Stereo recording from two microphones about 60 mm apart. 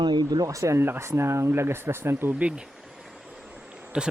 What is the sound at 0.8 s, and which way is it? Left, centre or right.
Speech, right.